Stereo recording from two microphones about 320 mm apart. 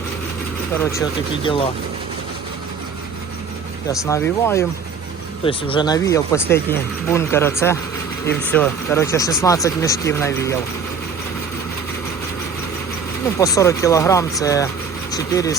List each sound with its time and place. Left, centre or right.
1.5 s speech: centre
3.8 s speech: centre
13.4 s speech: centre